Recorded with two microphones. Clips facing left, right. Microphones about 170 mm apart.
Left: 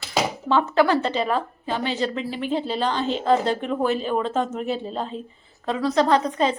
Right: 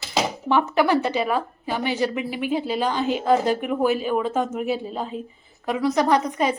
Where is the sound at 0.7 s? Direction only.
15° right (ahead or behind).